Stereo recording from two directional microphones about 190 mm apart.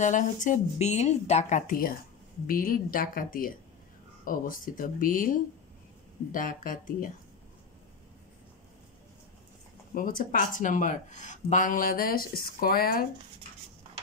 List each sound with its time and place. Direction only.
0.0 s speech: 40° left (ahead or behind)
9.9 s speech: 50° left (ahead or behind)